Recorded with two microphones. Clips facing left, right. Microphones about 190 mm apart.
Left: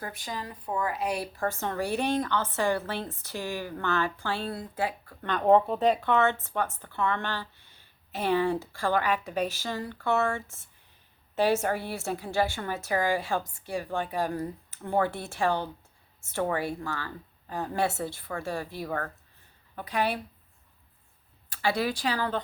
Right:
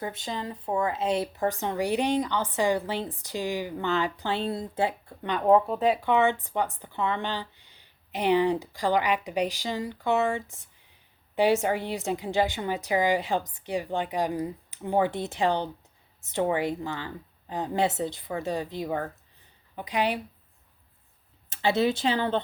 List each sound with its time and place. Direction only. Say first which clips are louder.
0.0 s speech: right 4 dB; 25° right (ahead or behind)
5.3 s speech: even; 5° right (ahead or behind)
6.1 s speech: right 2 dB; 15° right (ahead or behind)
21.5 s speech: right 4 dB; 25° right (ahead or behind)